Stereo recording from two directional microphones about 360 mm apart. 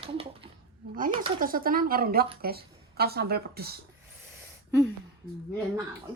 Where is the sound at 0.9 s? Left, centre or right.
Centre.